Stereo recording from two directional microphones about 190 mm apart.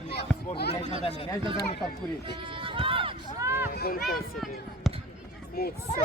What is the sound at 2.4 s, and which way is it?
Run, 25° right (ahead or behind).